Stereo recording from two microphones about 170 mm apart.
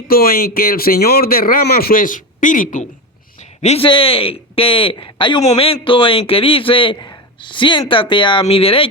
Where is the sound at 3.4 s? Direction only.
40° left (ahead or behind).